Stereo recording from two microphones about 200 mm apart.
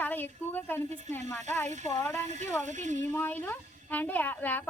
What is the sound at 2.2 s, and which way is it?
Speech, 35° right (ahead or behind).